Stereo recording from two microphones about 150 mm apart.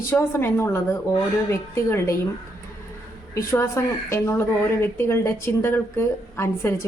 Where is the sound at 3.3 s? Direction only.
20° left (ahead or behind).